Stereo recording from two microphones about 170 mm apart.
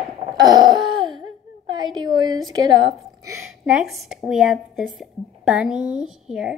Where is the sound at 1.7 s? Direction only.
25° right (ahead or behind).